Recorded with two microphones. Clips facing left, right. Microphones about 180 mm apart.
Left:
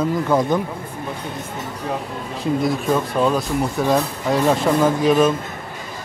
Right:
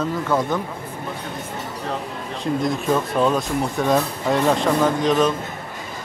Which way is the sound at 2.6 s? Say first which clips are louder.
Right 1 dB; centre (ahead or behind).